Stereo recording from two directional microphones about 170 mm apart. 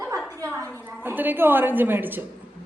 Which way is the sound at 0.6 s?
10° left (ahead or behind).